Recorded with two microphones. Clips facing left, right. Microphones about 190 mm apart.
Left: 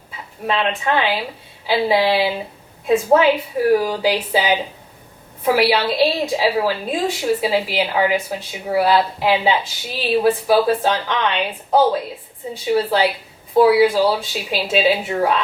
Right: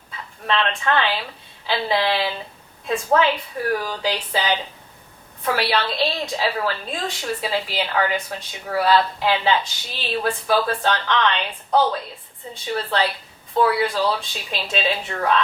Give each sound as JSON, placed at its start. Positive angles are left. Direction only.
{"t": 0.4, "sound": "a woman's voice", "side_deg": 10}
{"t": 2.8, "sound": "a woman's voice", "side_deg": 20}
{"t": 3.2, "sound": "a woman's voice", "side_deg": 5}